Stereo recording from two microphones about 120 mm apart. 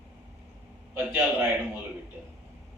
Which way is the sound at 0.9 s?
15° right (ahead or behind).